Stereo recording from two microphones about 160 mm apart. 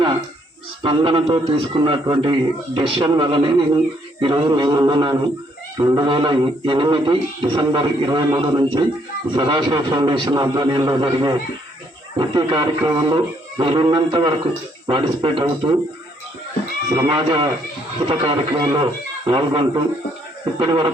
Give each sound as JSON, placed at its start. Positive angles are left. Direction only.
{"t": 0.8, "sound": "a man's voice", "side_deg": -35}
{"t": 16.9, "sound": "a man's voice", "side_deg": -30}